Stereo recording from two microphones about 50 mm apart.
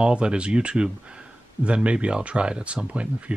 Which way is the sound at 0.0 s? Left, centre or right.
Right.